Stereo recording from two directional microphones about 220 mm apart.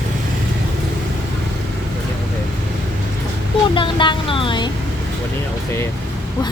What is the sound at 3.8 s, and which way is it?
Speech, 20° left (ahead or behind).